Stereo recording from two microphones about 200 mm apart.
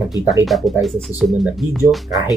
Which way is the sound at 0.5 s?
Centre (ahead or behind).